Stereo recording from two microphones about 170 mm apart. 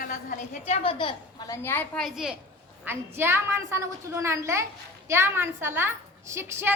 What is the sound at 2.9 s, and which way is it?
A woman's voice, 15° right (ahead or behind).